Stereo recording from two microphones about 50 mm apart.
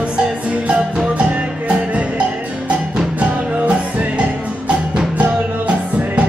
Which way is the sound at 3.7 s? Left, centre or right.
Right.